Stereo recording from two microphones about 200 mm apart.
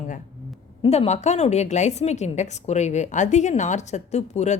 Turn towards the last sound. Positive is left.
turn(degrees=35)  # may be behind; listen again after turning